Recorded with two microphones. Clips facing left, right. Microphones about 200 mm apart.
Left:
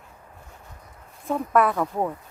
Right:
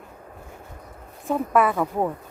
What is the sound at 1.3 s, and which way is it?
Speech, centre (ahead or behind).